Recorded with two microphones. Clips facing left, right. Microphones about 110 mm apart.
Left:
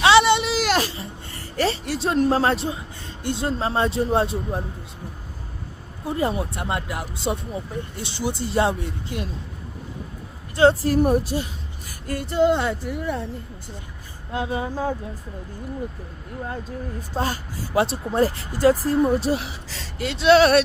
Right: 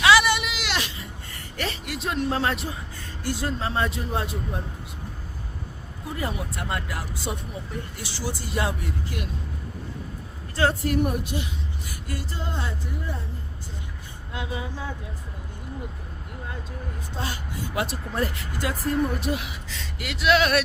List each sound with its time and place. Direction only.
0.0 s a sound: 25° left (ahead or behind)
3.2 s speech: 25° left (ahead or behind)
6.1 s speech: 30° left (ahead or behind)
10.5 s speech: 25° left (ahead or behind)
12.0 s female singing: 55° left (ahead or behind); by 13.2 s 75° left (ahead or behind)
14.3 s speech: 40° left (ahead or behind)
17.2 s a woman's voice: 45° left (ahead or behind)
17.7 s speech: 30° left (ahead or behind)